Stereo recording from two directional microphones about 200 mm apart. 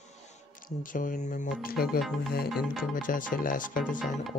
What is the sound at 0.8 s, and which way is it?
Speech, 40° left (ahead or behind).